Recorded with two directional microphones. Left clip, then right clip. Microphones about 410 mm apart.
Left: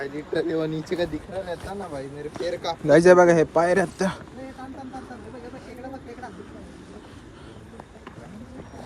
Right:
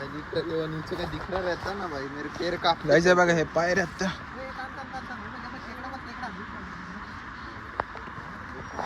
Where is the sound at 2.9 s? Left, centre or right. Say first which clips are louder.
Left 7 dB; centre.